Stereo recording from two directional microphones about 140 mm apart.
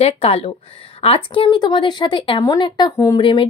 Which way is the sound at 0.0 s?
45° left (ahead or behind).